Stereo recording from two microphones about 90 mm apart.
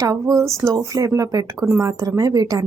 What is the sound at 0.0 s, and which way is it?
A woman's voice, 40° right (ahead or behind).